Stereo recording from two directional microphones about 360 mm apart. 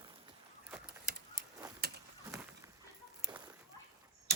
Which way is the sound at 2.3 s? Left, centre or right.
Centre.